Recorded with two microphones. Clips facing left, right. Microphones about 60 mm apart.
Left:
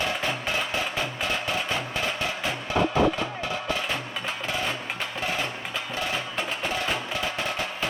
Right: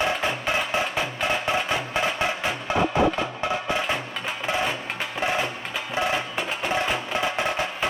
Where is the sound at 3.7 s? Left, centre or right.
Right.